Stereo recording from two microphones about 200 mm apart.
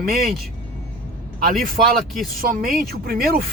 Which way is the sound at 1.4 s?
45° right (ahead or behind).